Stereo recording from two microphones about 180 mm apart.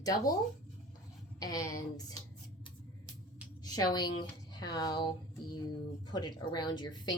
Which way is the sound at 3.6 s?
20° left (ahead or behind).